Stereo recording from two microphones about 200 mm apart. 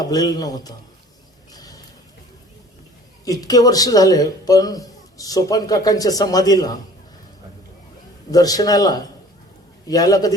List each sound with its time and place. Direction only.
0.0 s a man's voice: 20° left (ahead or behind)
1.5 s a sound: 20° left (ahead or behind)
3.2 s a man's voice: 20° left (ahead or behind)
8.3 s a man's voice: 20° left (ahead or behind)